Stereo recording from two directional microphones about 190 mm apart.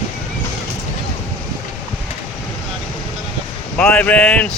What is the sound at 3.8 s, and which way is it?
Speech, 5° left (ahead or behind).